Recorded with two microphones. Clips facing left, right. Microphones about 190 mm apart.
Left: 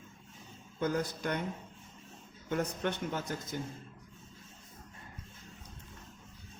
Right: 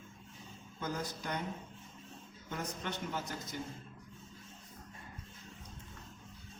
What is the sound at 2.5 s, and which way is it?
Speech, 55° left (ahead or behind).